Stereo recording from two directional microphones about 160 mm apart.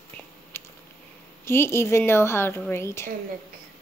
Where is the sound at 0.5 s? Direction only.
15° left (ahead or behind).